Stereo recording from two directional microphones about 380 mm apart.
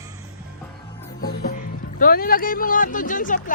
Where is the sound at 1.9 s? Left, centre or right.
Left.